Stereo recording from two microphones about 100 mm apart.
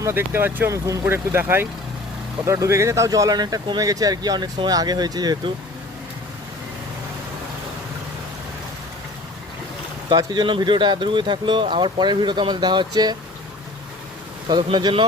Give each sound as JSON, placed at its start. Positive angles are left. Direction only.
{"t": 0.0, "sound": "speech", "side_deg": -20}
{"t": 10.1, "sound": "speech", "side_deg": -45}
{"t": 14.4, "sound": "speech", "side_deg": -50}